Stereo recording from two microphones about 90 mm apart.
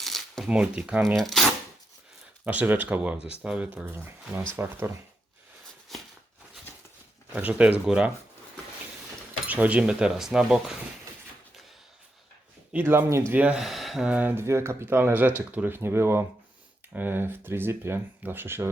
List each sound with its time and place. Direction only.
0.0 s shuffling cards: 5° left (ahead or behind)
0.4 s speech: 10° right (ahead or behind)
1.1 s speech: 5° left (ahead or behind)
2.4 s speech: 20° right (ahead or behind)
3.8 s speech: 25° right (ahead or behind)
5.9 s a sound: centre (ahead or behind)
7.3 s speech: 15° right (ahead or behind)
9.5 s speech: 15° right (ahead or behind)
12.7 s speech: 25° right (ahead or behind)
13.3 s speech: 15° right (ahead or behind)
13.6 s speech: centre (ahead or behind)
14.1 s speech: 20° right (ahead or behind)
14.4 s speech: 30° right (ahead or behind)